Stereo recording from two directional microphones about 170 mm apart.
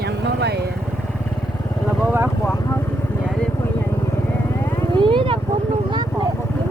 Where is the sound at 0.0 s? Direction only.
75° right (ahead or behind).